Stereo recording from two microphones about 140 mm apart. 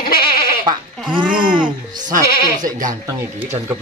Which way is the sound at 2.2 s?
90° left.